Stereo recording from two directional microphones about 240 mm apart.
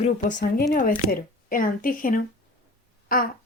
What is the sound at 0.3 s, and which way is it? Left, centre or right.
A woman's voice, left.